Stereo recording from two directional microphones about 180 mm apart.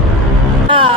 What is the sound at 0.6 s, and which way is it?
Music, 30° right (ahead or behind).